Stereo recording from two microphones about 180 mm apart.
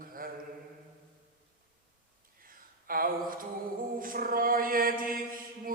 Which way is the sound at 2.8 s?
50° right (ahead or behind).